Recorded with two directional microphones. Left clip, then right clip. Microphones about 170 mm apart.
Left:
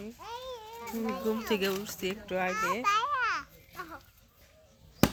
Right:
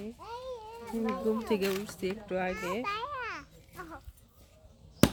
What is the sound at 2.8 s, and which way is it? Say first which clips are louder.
Babbling: left 7 dB; 5° right (ahead or behind).